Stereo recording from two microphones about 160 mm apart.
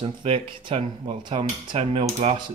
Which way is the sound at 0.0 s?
35° right (ahead or behind).